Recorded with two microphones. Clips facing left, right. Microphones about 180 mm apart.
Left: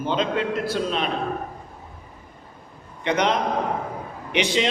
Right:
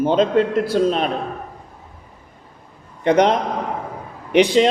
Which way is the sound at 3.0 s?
40° right (ahead or behind).